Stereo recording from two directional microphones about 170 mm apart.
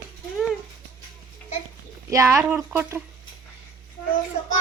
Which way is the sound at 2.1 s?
15° right (ahead or behind).